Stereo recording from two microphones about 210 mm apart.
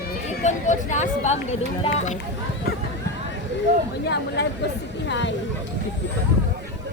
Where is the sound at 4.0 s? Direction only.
55° left (ahead or behind).